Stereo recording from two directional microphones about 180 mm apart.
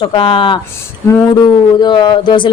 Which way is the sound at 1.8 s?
25° left (ahead or behind).